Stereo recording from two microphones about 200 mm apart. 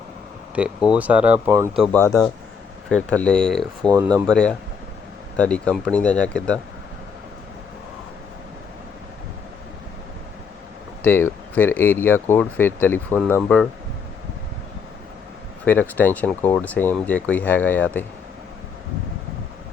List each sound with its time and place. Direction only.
0.9 s speech: 5° right (ahead or behind)
1.7 s speech: 5° left (ahead or behind)
3.9 s speech: 20° right (ahead or behind)
4.3 s speech: 5° left (ahead or behind)
11.0 s speech: 10° left (ahead or behind)
15.6 s speech: 10° left (ahead or behind)